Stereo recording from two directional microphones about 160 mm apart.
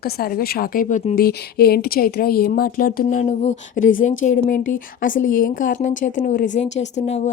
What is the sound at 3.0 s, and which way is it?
A woman's voice, 50° left (ahead or behind).